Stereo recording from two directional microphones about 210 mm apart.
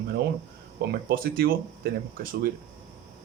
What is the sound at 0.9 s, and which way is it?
Speech, 45° right (ahead or behind).